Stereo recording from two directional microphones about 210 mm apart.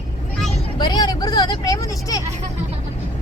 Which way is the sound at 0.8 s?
20° left (ahead or behind).